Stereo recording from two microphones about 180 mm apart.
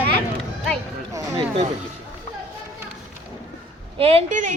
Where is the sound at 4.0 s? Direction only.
35° right (ahead or behind).